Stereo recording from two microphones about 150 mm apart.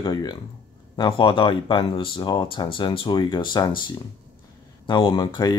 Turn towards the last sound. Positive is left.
turn(degrees=30)  # may be behind; listen again after turning